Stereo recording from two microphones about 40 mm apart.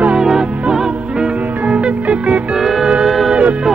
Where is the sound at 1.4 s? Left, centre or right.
Right.